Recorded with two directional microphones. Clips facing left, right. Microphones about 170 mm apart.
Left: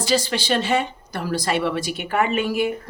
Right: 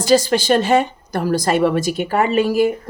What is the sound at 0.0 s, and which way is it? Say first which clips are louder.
A woman's voice: right 7 dB; 45° right (ahead or behind).